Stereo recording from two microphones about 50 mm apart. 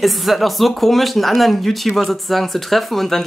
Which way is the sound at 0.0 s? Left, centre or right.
Centre.